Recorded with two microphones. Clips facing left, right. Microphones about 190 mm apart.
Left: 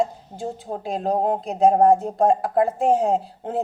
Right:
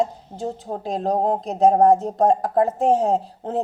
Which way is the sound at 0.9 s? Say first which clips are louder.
Right 1 dB; 35° right (ahead or behind).